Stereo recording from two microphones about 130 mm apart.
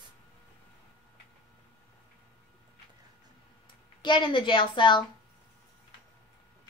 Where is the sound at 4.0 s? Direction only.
40° left (ahead or behind).